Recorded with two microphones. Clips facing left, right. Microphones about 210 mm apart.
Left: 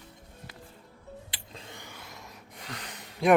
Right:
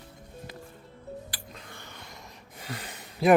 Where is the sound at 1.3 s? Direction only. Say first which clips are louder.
Right 1 dB; 25° left (ahead or behind).